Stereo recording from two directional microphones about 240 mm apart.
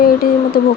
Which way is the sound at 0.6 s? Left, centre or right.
Left.